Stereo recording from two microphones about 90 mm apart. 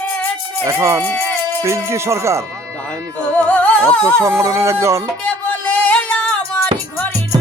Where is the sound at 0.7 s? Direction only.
30° right (ahead or behind).